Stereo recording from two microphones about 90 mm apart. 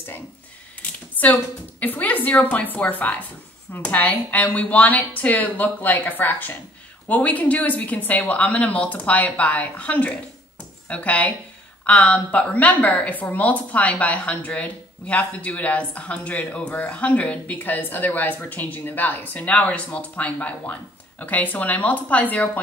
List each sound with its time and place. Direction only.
1.2 s a woman's voice: 15° left (ahead or behind)